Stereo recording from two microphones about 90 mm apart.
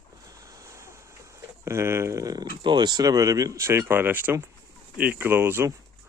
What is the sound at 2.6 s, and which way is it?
Speech, 55° right (ahead or behind).